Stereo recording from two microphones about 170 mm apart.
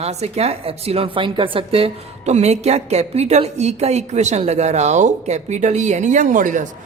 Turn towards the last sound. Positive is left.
turn(degrees=-50)  # may be behind; listen again after turning